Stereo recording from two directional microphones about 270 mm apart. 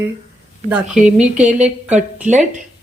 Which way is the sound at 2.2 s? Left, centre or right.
Right.